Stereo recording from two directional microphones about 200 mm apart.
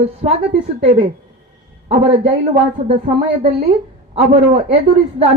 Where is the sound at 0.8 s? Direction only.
30° right (ahead or behind).